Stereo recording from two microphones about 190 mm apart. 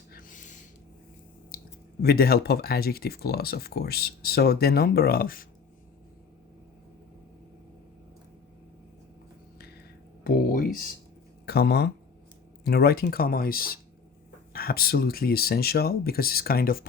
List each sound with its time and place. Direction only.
0.1 s a sound: 45° left (ahead or behind)
1.5 s speech: 55° left (ahead or behind)
10.2 s speech: 50° left (ahead or behind)